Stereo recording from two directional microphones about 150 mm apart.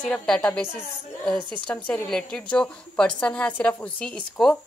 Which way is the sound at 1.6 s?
5° left (ahead or behind).